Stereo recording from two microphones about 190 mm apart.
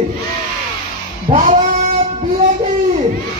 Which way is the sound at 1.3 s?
40° right (ahead or behind).